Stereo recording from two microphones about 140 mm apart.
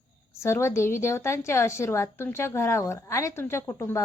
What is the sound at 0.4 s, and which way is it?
Speech, 20° left (ahead or behind).